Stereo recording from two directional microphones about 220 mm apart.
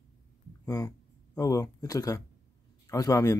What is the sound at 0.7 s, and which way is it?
Speech, 15° left (ahead or behind).